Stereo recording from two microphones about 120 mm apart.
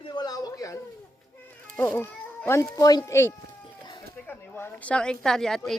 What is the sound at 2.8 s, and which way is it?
A woman's voice, 30° left (ahead or behind).